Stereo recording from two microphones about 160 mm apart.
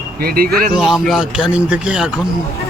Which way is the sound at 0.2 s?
70° right (ahead or behind).